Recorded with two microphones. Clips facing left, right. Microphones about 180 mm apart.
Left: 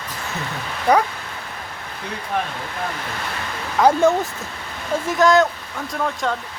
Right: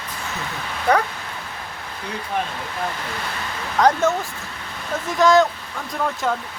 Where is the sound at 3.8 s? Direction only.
10° left (ahead or behind).